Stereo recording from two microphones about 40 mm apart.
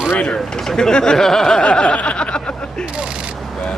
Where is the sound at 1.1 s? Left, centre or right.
Centre.